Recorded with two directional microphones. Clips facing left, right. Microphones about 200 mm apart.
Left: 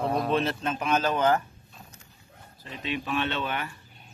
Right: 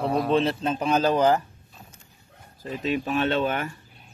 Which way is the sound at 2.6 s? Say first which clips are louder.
Right 6 dB; 45° right (ahead or behind).